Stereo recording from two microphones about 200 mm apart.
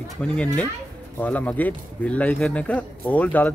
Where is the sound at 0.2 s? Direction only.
5° left (ahead or behind).